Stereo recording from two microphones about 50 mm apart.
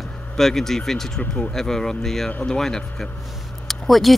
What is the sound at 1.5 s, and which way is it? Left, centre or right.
Speech, centre.